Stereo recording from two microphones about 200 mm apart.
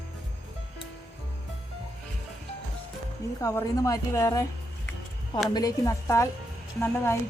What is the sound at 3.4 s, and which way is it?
A woman's voice, 15° left (ahead or behind).